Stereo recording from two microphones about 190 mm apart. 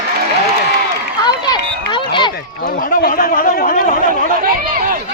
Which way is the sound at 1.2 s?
20° left (ahead or behind).